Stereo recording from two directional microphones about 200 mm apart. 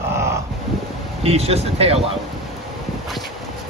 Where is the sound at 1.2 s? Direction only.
30° right (ahead or behind).